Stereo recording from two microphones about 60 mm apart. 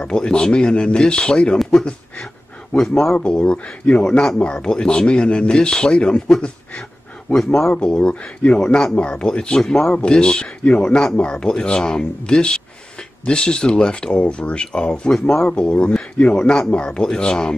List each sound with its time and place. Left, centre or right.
0.0 s speech: centre
2.7 s speech: left